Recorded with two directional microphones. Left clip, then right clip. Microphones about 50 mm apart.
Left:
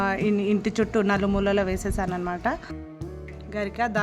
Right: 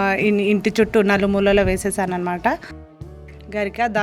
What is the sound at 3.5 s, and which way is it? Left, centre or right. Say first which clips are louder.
Speech: right 6 dB; right.